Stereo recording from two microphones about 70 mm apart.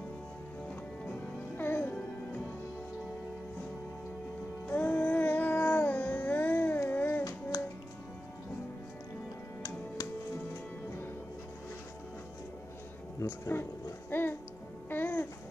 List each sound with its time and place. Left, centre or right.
1.6 s music: left
4.6 s music: left
13.2 s speech: left
14.1 s music: left